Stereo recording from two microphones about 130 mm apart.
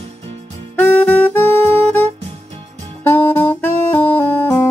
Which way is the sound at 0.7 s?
15° left (ahead or behind).